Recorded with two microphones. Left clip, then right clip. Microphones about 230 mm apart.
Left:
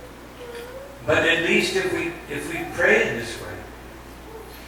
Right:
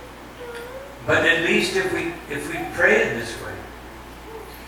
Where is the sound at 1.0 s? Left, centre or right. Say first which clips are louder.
Right 1 dB; centre.